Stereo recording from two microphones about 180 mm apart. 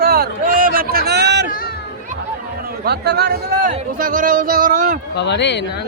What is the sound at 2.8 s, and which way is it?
Speech, 65° right (ahead or behind).